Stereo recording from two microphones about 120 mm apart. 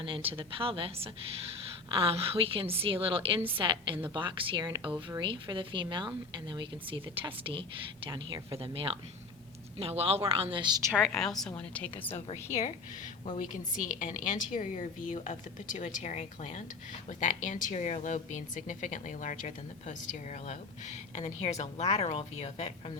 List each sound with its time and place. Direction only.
0.0 s a woman's voice: 45° right (ahead or behind)
10.9 s a woman's voice: centre (ahead or behind)
12.1 s a woman's voice: 70° left (ahead or behind)
14.0 s speech: 90° left
17.1 s speech: 90° left; by 22.7 s 60° left (ahead or behind)